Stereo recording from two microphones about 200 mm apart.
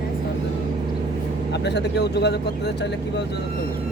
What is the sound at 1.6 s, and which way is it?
Speech, 60° left (ahead or behind).